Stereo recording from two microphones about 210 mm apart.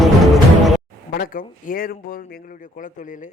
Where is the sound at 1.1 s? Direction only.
45° left (ahead or behind).